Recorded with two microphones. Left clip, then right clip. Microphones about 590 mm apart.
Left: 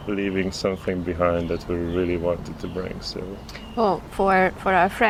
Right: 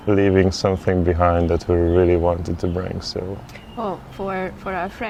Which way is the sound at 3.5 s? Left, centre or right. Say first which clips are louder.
Left 5 dB; centre.